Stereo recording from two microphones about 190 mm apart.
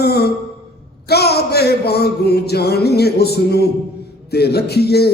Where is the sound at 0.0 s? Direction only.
55° left (ahead or behind).